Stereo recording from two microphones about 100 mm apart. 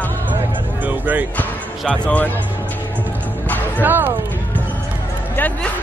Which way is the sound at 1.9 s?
15° left (ahead or behind).